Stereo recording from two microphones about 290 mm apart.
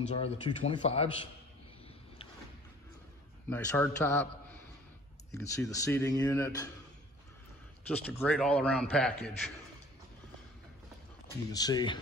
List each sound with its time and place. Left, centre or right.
0.1 s speech: centre
3.4 s speech: centre
5.3 s speech: centre
7.9 s speech: centre
11.5 s speech: centre